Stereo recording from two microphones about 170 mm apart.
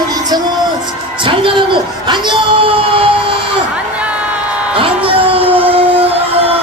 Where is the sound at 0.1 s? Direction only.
25° right (ahead or behind).